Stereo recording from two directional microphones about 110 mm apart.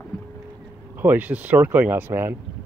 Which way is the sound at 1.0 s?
15° right (ahead or behind).